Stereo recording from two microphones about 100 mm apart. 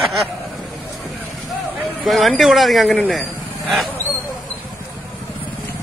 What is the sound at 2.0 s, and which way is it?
Speech, centre (ahead or behind).